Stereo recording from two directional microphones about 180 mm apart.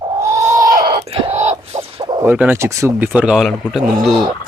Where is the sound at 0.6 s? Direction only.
50° right (ahead or behind).